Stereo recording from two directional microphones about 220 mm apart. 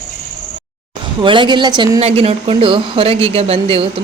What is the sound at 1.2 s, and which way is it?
A woman's voice, 20° right (ahead or behind).